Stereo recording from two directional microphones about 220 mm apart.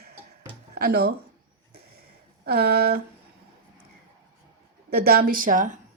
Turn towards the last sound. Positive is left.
turn(degrees=-35)  # may be behind; listen again after turning